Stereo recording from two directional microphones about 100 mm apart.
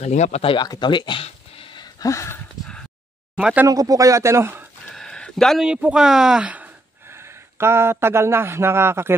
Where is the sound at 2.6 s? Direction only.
10° left (ahead or behind).